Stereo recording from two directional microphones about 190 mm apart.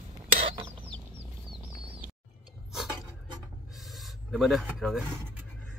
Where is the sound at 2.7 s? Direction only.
Centre (ahead or behind).